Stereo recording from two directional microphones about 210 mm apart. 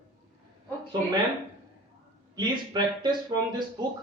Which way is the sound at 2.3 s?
20° right (ahead or behind).